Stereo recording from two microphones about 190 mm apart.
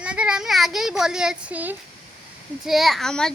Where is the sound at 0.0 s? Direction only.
5° right (ahead or behind).